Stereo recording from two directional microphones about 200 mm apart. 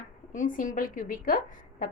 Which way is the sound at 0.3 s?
40° left (ahead or behind).